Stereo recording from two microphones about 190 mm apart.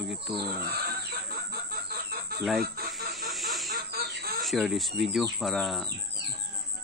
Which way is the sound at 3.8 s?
55° right (ahead or behind).